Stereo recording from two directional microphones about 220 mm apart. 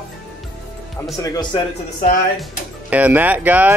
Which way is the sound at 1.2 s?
15° left (ahead or behind).